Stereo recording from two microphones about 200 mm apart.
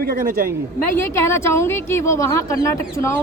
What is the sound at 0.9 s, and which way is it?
A woman's voice, 15° left (ahead or behind).